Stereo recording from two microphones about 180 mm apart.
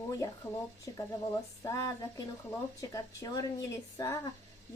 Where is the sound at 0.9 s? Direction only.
20° left (ahead or behind).